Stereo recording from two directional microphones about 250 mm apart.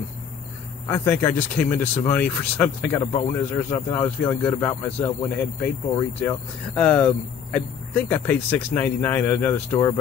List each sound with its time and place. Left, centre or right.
0.8 s speech: centre